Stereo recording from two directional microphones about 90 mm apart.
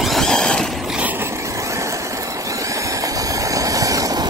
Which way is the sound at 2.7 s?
35° right (ahead or behind).